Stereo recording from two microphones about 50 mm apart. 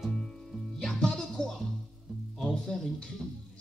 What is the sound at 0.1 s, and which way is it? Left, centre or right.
Music, centre.